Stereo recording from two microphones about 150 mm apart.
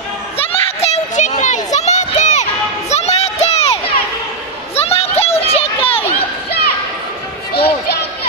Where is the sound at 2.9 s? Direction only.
45° left (ahead or behind).